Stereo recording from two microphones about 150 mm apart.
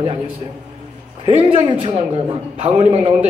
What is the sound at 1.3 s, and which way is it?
A man's voice, 35° right (ahead or behind).